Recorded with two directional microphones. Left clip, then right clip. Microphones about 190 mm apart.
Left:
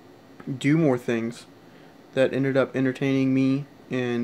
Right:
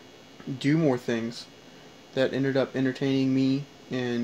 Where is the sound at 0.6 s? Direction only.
10° left (ahead or behind).